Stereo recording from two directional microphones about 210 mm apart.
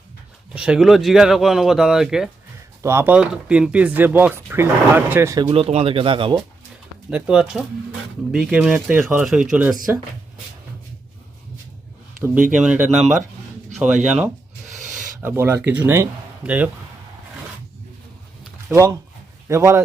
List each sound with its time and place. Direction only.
0.5 s speech: 5° right (ahead or behind); by 6.4 s 25° right (ahead or behind)
7.1 s speech: 5° right (ahead or behind)
12.2 s speech: 5° right (ahead or behind)
14.7 s a sound: 35° right (ahead or behind)
15.2 s speech: 10° right (ahead or behind)
18.7 s speech: 15° right (ahead or behind)